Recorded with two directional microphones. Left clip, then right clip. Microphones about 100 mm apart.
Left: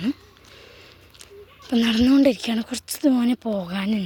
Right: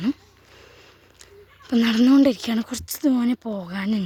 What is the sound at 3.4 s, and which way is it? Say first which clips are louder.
Speech: left 3 dB; 5° right (ahead or behind).